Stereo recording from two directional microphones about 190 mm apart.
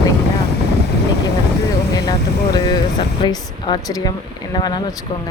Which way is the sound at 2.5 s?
20° left (ahead or behind).